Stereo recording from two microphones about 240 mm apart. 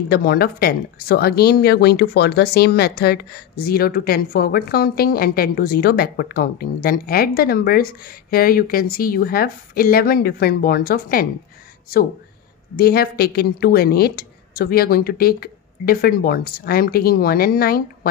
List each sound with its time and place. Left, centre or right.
0.1 s speech: left
12.7 s speech: left